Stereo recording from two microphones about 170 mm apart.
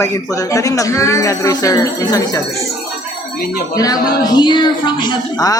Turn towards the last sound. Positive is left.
turn(degrees=20)  # may be behind; listen again after turning